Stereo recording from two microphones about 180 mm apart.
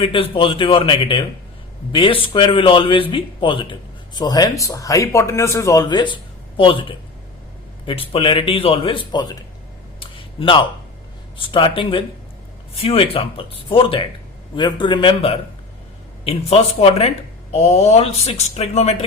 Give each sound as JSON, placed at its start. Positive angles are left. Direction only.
{"t": 0.0, "sound": "speech", "side_deg": 30}
{"t": 10.0, "sound": "a sound", "side_deg": 30}
{"t": 11.3, "sound": "speech", "side_deg": 30}
{"t": 16.5, "sound": "speech", "side_deg": 35}